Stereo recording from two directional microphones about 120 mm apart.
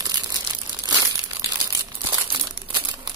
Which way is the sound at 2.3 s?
40° right (ahead or behind).